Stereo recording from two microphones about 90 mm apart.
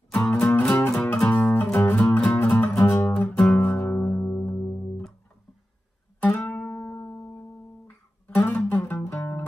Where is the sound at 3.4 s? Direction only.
15° left (ahead or behind).